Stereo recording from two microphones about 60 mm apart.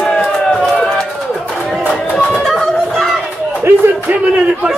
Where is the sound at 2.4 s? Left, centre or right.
Centre.